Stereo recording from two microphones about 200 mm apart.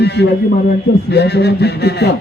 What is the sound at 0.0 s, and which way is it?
A man's voice, 55° left (ahead or behind).